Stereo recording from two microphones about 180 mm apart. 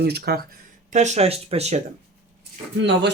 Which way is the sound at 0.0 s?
65° right (ahead or behind).